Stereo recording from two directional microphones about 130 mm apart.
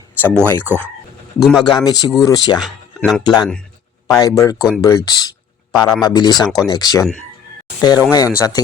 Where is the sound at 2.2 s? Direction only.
35° left (ahead or behind).